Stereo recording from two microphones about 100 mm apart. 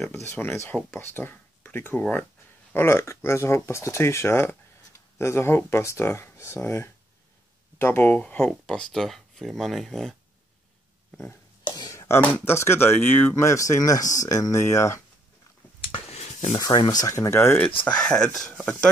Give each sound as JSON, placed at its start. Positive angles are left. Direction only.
{"t": 0.1, "sound": "speech", "side_deg": 25}
{"t": 2.7, "sound": "speech", "side_deg": 25}
{"t": 11.9, "sound": "a sound", "side_deg": 30}
{"t": 12.2, "sound": "speech", "side_deg": 20}
{"t": 15.8, "sound": "a sound", "side_deg": 80}
{"t": 16.5, "sound": "speech", "side_deg": 40}
{"t": 17.8, "sound": "speech", "side_deg": 10}